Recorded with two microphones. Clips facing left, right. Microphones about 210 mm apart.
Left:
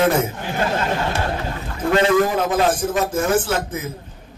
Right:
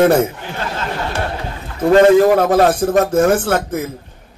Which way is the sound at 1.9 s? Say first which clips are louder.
Right 8 dB; 45° right (ahead or behind).